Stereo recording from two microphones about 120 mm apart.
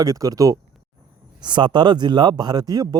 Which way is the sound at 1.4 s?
40° right (ahead or behind).